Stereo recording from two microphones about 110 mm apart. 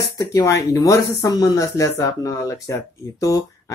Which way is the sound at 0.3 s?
35° left (ahead or behind).